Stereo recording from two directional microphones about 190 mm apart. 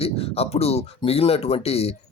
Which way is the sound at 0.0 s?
30° left (ahead or behind).